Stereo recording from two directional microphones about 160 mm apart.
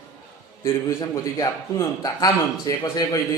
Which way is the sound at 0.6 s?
20° left (ahead or behind).